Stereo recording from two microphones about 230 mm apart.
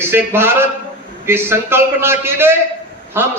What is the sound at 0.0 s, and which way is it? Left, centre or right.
A man's voice, centre.